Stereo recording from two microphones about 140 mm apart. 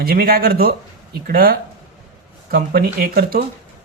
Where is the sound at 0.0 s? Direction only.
90° right.